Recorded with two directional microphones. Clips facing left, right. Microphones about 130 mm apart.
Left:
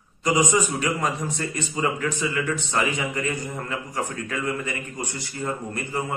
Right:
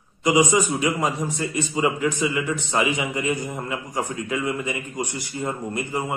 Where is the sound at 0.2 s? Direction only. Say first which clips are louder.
Right 3 dB; 15° right (ahead or behind).